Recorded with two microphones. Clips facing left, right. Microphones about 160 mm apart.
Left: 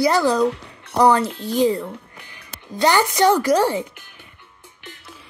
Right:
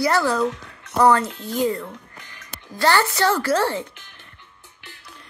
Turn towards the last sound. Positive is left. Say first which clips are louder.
# left 3 dB
turn(degrees=15)  # may be behind; listen again after turning